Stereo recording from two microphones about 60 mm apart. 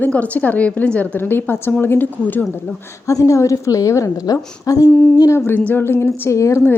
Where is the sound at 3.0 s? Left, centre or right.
Left.